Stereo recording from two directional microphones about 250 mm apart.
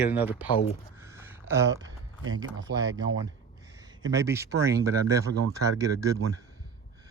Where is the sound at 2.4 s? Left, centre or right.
Right.